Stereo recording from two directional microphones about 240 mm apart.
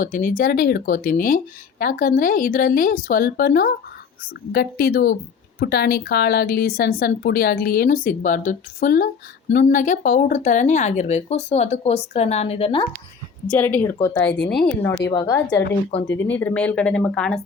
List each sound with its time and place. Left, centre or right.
0.0 s speech: left
13.5 s speech: centre